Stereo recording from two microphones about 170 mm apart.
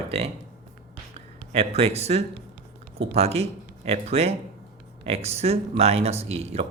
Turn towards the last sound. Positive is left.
turn(degrees=-35)  # may be behind; listen again after turning